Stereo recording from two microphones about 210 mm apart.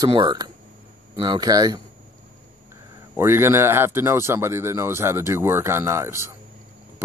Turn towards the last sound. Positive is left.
turn(degrees=-10)  # may be behind; listen again after turning